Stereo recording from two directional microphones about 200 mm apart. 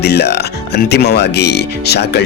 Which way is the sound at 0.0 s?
55° left (ahead or behind).